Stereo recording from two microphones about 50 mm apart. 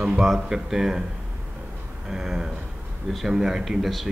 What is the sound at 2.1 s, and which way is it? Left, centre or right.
Speech, centre.